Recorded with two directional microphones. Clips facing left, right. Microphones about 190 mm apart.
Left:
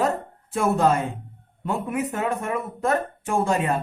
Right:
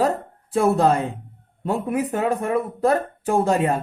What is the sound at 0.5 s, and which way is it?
Speech, 35° right (ahead or behind).